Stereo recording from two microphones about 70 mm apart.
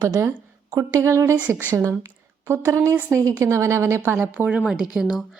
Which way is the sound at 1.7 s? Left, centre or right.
Right.